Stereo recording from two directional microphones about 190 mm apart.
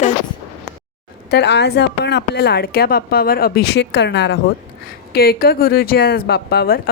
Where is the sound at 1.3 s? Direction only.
65° left (ahead or behind).